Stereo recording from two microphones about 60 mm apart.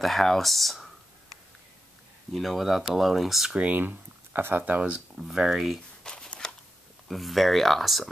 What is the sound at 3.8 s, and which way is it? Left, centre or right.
Speech, right.